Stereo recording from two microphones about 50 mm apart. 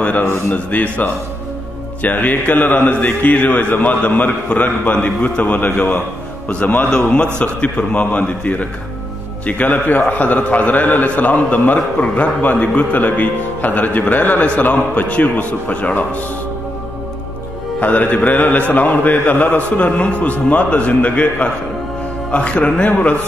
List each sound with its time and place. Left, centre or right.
0.0 s a man's voice: left
6.9 s a man's voice: centre; by 16.2 s left
17.7 s a man's voice: left